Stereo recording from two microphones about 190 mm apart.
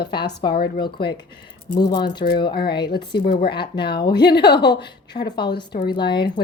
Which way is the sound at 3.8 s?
25° left (ahead or behind).